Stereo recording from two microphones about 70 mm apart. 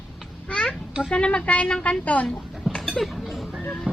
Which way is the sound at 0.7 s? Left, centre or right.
Centre.